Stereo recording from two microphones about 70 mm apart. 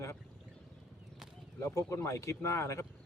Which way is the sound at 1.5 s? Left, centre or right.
Left.